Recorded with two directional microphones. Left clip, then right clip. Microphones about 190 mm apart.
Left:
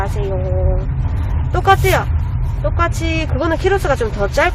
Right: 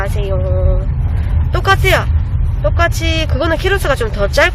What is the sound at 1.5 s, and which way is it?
Speech, centre (ahead or behind).